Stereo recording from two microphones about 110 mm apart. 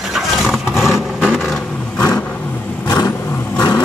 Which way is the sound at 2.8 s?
30° left (ahead or behind).